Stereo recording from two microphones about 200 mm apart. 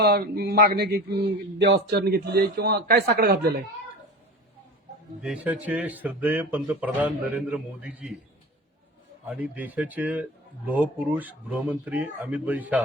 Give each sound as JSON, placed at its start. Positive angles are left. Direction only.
{"t": 0.0, "sound": "a man's voice", "side_deg": -50}
{"t": 5.2, "sound": "speech", "side_deg": -5}
{"t": 9.2, "sound": "speech", "side_deg": -5}